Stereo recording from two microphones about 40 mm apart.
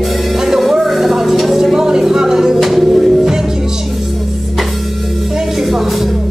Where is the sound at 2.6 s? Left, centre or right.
Centre.